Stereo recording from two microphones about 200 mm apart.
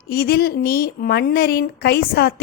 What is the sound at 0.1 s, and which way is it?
A woman's voice, 50° left (ahead or behind).